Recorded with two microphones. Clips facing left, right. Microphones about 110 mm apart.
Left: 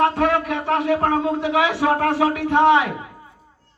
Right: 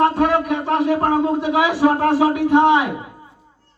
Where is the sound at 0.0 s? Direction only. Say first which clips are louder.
Right 2 dB; 15° right (ahead or behind).